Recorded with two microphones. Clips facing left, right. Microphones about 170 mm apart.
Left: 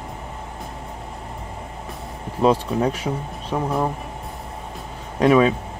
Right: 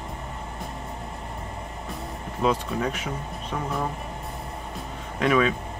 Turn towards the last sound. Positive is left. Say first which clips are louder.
# left 6 dB
turn(degrees=35)  # may be behind; listen again after turning